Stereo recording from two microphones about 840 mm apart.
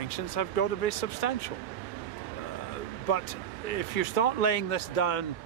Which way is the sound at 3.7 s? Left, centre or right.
Left.